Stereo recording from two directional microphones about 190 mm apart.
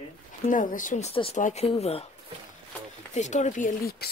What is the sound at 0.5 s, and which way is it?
Speech, 45° left (ahead or behind).